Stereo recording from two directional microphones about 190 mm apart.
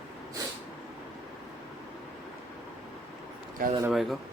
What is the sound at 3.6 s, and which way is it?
Speech, 50° right (ahead or behind).